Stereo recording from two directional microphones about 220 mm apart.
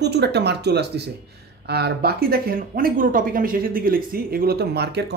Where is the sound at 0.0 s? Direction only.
50° right (ahead or behind).